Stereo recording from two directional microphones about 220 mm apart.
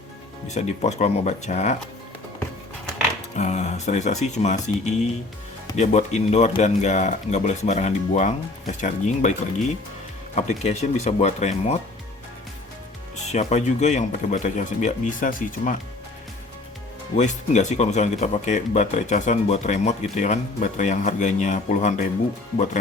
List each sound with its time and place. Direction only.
0.4 s speech: 30° left (ahead or behind)
3.3 s speech: 30° left (ahead or behind)
10.3 s speech: 30° left (ahead or behind)
13.2 s speech: 30° left (ahead or behind)
17.2 s speech: 35° left (ahead or behind)